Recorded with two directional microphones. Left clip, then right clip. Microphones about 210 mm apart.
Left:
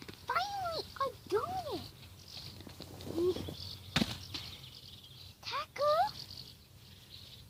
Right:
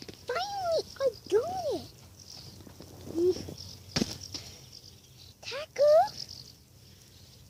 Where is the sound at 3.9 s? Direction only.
55° left (ahead or behind).